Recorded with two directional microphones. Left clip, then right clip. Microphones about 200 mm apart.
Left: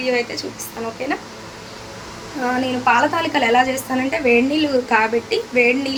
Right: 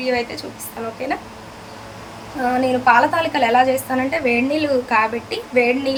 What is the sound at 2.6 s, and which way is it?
A woman's voice, 5° left (ahead or behind).